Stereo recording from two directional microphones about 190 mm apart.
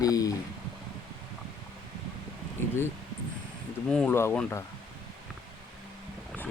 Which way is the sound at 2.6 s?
10° left (ahead or behind).